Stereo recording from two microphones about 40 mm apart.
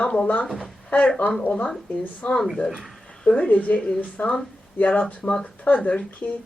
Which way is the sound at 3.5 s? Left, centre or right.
Left.